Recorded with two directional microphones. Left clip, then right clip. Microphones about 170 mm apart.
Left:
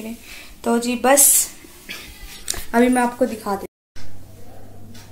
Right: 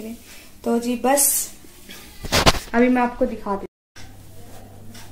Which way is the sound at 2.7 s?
15° left (ahead or behind).